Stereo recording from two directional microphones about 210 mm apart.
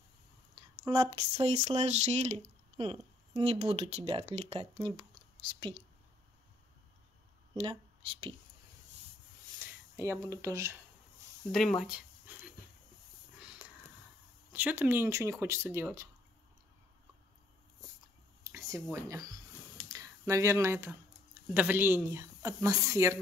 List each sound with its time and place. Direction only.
0.6 s a sound: 15° right (ahead or behind)
1.1 s speech: 30° right (ahead or behind)
8.1 s speech: 25° right (ahead or behind)
9.6 s speech: 15° right (ahead or behind)
11.5 s speech: centre (ahead or behind)
13.4 s a sound: 5° right (ahead or behind)
14.5 s speech: 10° right (ahead or behind)
18.4 s speech: 15° right (ahead or behind)